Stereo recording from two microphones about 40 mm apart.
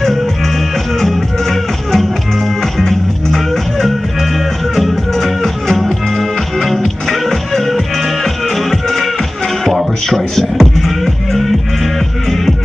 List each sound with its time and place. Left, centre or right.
1.0 s music: centre
4.7 s music: centre
10.0 s beatboxing: centre